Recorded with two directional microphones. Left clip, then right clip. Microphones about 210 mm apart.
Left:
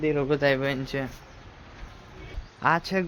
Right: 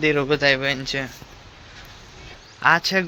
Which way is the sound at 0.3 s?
10° left (ahead or behind).